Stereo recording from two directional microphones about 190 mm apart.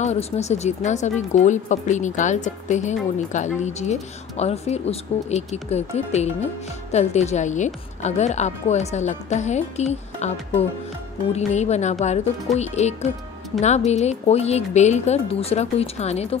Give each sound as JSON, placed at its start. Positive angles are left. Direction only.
{"t": 0.0, "sound": "speech", "side_deg": 35}
{"t": 11.3, "sound": "speech", "side_deg": 35}